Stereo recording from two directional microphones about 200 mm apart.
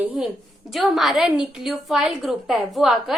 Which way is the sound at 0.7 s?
Centre (ahead or behind).